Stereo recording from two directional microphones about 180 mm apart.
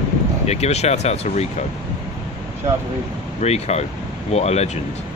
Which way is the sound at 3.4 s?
35° left (ahead or behind).